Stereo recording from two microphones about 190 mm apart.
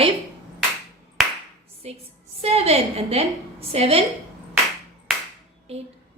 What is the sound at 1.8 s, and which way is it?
A woman's voice, 35° right (ahead or behind).